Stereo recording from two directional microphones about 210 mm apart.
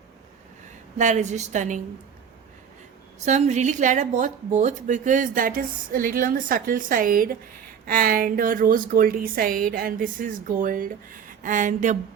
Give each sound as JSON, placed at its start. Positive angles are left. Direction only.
{"t": 0.9, "sound": "speech", "side_deg": -35}
{"t": 3.2, "sound": "a woman's voice", "side_deg": -35}